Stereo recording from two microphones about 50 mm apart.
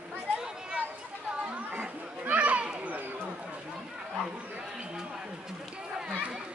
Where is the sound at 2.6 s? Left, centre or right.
Right.